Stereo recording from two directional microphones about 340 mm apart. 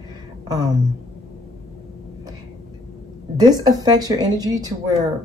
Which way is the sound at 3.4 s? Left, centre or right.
Centre.